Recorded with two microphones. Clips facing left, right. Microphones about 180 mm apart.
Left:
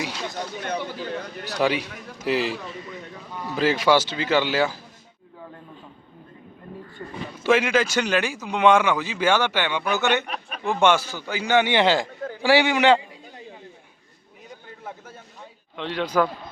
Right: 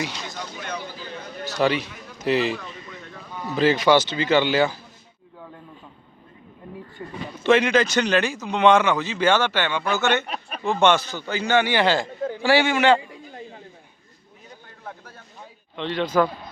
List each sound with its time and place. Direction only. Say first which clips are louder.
0.6 s speech: left 5 dB; 60° left (ahead or behind)
1.5 s speech: right 1 dB; 10° left (ahead or behind)
7.0 s a sound: right 1 dB; 10° right (ahead or behind)
7.4 s speech: right 2 dB; 5° left (ahead or behind)
15.7 s speech: right 2 dB; 5° left (ahead or behind)